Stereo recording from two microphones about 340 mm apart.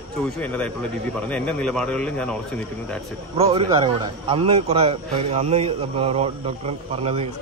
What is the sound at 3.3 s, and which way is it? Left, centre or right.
A man's voice, centre.